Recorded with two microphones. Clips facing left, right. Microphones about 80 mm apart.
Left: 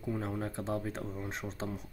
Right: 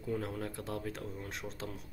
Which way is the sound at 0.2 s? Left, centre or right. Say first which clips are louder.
Left 3 dB; left.